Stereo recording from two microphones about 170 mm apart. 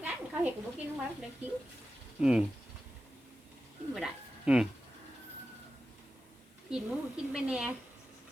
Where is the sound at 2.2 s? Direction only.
5° right (ahead or behind).